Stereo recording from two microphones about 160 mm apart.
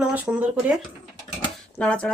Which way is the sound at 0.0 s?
5° right (ahead or behind).